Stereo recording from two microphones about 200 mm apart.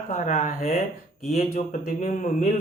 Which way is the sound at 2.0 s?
40° left (ahead or behind).